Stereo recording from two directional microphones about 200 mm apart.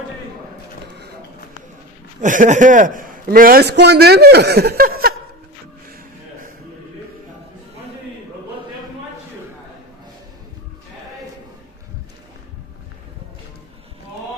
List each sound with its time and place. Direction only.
2.2 s a man's voice: 40° right (ahead or behind)